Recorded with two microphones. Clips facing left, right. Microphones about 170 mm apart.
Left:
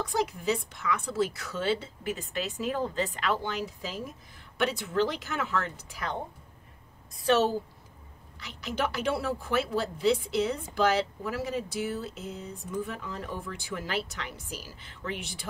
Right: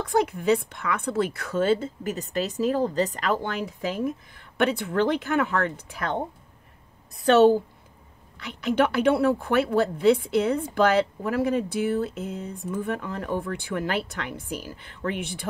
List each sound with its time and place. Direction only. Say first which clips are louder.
0.0 s a woman's voice: right 6 dB; 55° right (ahead or behind)
7.2 s a woman's voice: right 8 dB; 60° right (ahead or behind)